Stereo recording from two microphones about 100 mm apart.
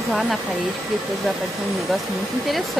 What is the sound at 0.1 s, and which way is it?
Speech, centre (ahead or behind).